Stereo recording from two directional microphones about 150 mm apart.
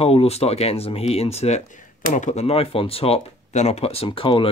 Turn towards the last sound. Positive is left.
turn(degrees=35)  # may be behind; listen again after turning